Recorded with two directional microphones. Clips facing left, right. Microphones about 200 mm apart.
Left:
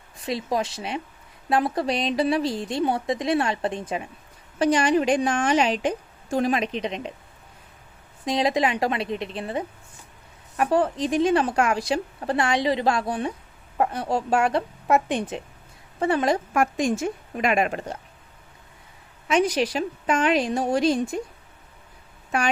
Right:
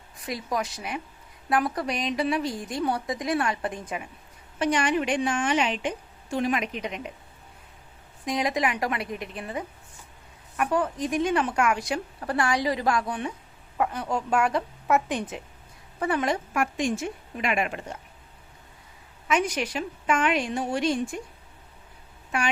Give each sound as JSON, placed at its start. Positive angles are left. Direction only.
{"t": 0.3, "sound": "a woman's voice", "side_deg": 25}
{"t": 8.2, "sound": "a woman's voice", "side_deg": 30}
{"t": 19.3, "sound": "a woman's voice", "side_deg": 35}